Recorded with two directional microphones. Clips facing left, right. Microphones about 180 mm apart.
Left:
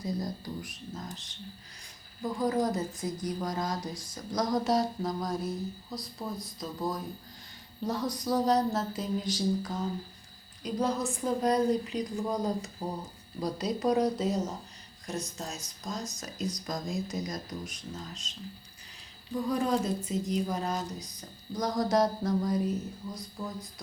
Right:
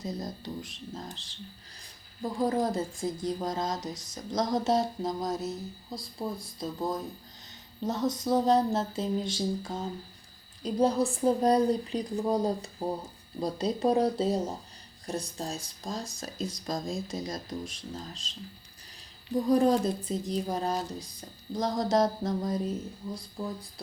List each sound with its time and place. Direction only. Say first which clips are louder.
0.0 s speech: left 2 dB; 25° right (ahead or behind)
2.4 s speech: right 1 dB; 25° right (ahead or behind)
19.3 s speech: right 5 dB; 35° right (ahead or behind)